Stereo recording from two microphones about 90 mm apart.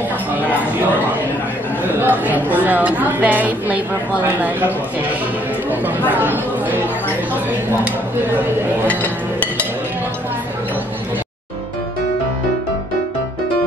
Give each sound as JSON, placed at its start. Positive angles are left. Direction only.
{"t": 2.0, "sound": "a woman's voice", "side_deg": -20}
{"t": 8.8, "sound": "music", "side_deg": 15}